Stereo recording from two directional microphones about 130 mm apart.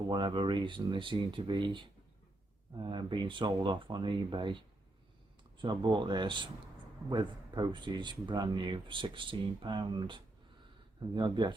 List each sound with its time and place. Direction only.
0.1 s speech: 35° right (ahead or behind)
5.6 s speech: 35° right (ahead or behind)